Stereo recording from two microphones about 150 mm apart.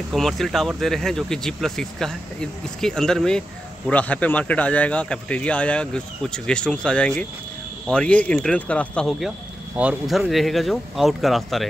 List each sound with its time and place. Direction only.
0.1 s speech: centre (ahead or behind)